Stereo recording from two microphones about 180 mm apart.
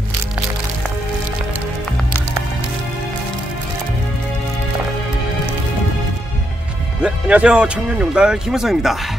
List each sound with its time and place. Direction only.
7.0 s speech: 5° right (ahead or behind)